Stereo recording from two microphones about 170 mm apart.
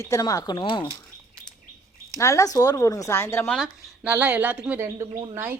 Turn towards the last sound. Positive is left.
turn(degrees=-15)  # may be behind; listen again after turning